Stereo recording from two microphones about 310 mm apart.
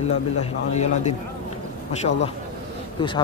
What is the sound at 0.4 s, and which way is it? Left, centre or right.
Speech, left.